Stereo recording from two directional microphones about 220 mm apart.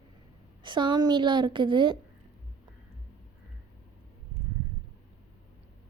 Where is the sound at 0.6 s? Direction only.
20° right (ahead or behind).